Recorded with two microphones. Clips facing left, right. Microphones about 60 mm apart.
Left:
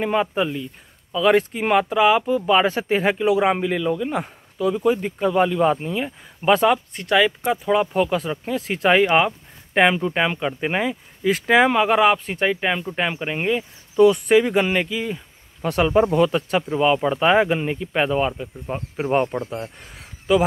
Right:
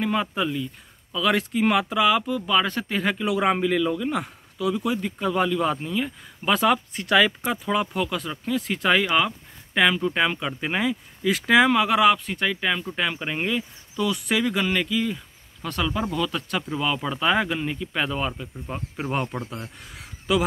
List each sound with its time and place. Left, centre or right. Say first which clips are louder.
0.0 s speech: left 4 dB; centre
9.0 s speech: left 5 dB; left
13.9 s speech: left 11 dB; left
14.6 s speech: left 2 dB; left
15.6 s speech: left 9 dB; left
16.3 s speech: left 6 dB; left; by 20.1 s centre